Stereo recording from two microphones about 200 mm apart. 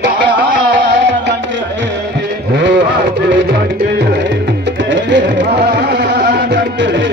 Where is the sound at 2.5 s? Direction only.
60° right (ahead or behind).